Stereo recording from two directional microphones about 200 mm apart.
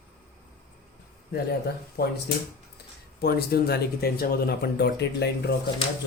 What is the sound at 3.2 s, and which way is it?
Speech, 55° left (ahead or behind).